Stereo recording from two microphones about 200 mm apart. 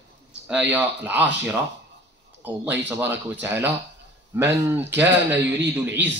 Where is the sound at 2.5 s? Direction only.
10° right (ahead or behind).